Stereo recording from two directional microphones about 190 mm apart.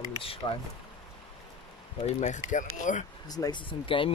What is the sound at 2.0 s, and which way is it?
Speech, 40° left (ahead or behind).